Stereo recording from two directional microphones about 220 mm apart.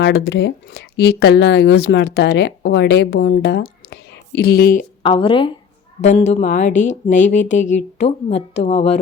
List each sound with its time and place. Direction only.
0.0 s speech: 50° left (ahead or behind)
5.0 s speech: 25° left (ahead or behind)